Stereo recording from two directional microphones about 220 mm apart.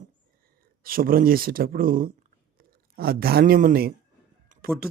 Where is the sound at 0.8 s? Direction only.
40° right (ahead or behind).